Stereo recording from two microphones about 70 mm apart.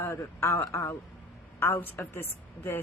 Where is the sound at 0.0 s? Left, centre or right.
Left.